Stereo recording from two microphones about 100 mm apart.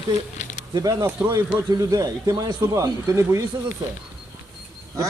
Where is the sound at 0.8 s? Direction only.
40° right (ahead or behind).